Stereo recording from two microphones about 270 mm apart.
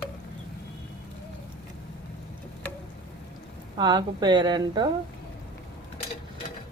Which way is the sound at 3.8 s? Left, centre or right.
Centre.